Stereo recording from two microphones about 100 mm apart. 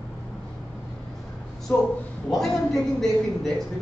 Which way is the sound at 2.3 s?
Centre (ahead or behind).